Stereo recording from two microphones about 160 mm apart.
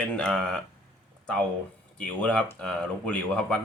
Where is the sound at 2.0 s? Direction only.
10° left (ahead or behind).